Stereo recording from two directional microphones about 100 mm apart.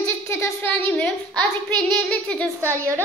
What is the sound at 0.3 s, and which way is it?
Speech, 25° left (ahead or behind).